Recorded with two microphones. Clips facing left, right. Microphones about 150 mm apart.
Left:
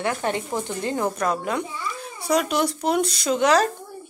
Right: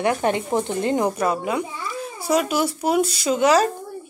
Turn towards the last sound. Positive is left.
turn(degrees=-5)  # may be behind; listen again after turning